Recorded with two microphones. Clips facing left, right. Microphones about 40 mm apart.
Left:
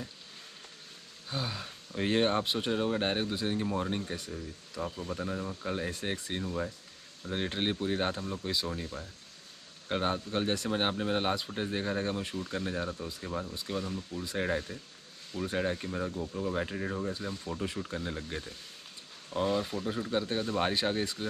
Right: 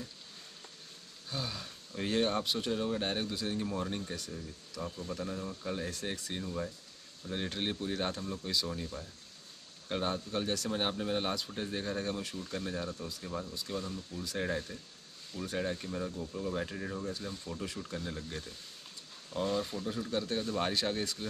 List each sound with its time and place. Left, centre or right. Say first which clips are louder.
1.3 s speech: left 3 dB; left